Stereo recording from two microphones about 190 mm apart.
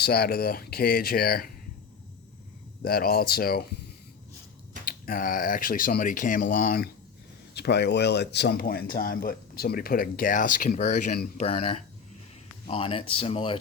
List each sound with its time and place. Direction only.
0.0 s speech: 55° left (ahead or behind)
2.8 s speech: 50° left (ahead or behind)
4.9 s speech: 45° left (ahead or behind); by 13.6 s 30° left (ahead or behind)